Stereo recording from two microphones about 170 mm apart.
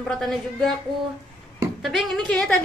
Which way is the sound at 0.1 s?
5° left (ahead or behind).